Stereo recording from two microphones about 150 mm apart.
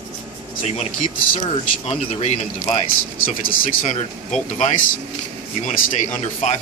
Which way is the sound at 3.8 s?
55° left (ahead or behind).